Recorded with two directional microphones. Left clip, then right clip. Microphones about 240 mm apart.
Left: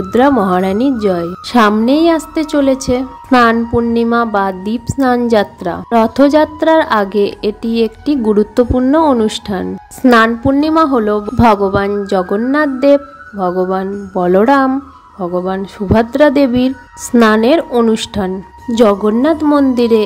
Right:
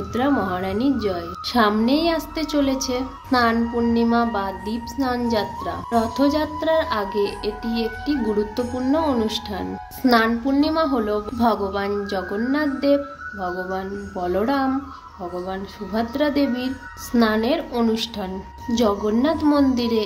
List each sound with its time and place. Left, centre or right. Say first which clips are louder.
0.1 s a woman's voice: left 12 dB; left